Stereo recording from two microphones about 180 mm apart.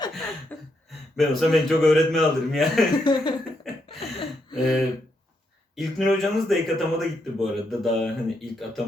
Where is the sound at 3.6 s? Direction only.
Centre (ahead or behind).